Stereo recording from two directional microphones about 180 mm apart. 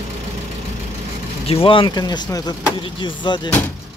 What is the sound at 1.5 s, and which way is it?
Speech, 30° left (ahead or behind).